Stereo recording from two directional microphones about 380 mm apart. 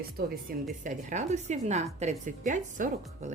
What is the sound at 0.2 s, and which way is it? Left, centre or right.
A woman's voice, right.